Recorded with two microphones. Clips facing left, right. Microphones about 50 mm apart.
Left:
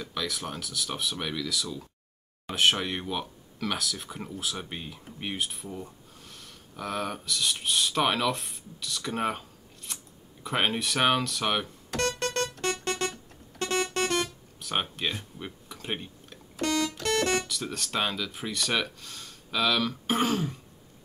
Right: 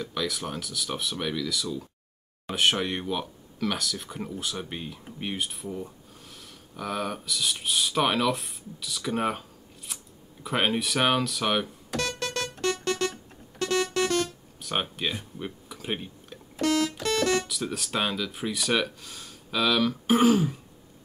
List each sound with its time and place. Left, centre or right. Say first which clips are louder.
0.0 s speech: right 3 dB; centre
12.0 s keyboard: left 2 dB; left
13.6 s music: right 2 dB; left
14.6 s speech: right 1 dB; centre
17.0 s keyboard: right 1 dB; left
17.5 s speech: right 2 dB; centre